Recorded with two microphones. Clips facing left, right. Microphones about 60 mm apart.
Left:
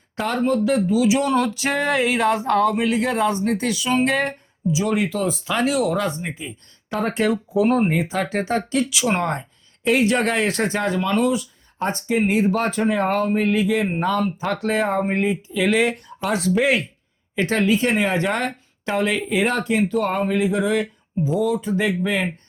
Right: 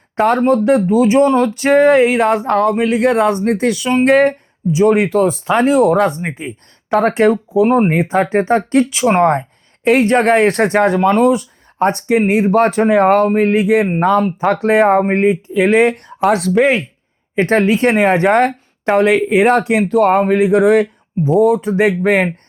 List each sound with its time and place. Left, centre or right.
0.2 s speech: right
7.8 s speech: right
13.9 s speech: right
15.6 s speech: right
17.4 s speech: right
19.6 s speech: right